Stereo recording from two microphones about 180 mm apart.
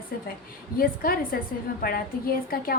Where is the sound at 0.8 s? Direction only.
55° left (ahead or behind).